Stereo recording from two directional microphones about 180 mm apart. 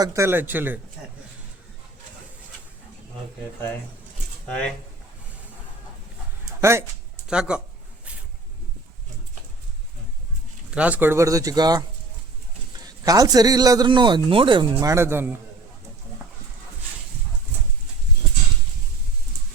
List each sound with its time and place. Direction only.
0.0 s speech: 15° right (ahead or behind)
4.4 s speech: 5° left (ahead or behind)
6.6 s speech: 15° right (ahead or behind)
10.8 s a man's voice: 10° right (ahead or behind)